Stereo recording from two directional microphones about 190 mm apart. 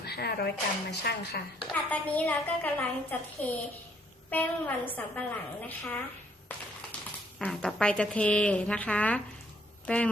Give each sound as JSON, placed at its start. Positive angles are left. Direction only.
{"t": 0.0, "sound": "speech", "side_deg": 60}
{"t": 1.7, "sound": "a woman's voice", "side_deg": 10}
{"t": 7.3, "sound": "a woman's voice", "side_deg": 5}